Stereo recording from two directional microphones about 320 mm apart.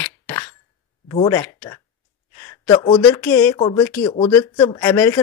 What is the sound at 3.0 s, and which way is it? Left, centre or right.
Speech, centre.